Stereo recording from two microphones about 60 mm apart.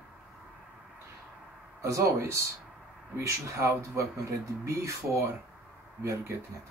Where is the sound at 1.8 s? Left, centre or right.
Right.